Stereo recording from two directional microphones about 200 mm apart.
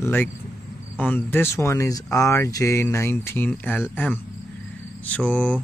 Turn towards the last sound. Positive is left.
turn(degrees=5)  # may be behind; listen again after turning